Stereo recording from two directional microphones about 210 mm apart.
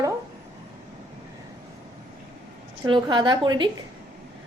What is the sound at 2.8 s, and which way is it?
Speech, 20° right (ahead or behind).